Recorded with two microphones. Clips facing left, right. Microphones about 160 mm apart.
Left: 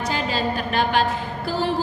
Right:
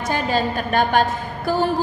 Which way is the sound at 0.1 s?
50° right (ahead or behind).